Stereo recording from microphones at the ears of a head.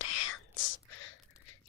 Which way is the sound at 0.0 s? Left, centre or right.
Left.